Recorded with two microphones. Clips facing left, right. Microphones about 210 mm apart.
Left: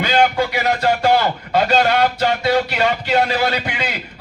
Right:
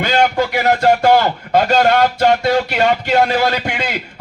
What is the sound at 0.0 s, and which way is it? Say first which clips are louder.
A man's voice: right 1 dB; 45° right (ahead or behind).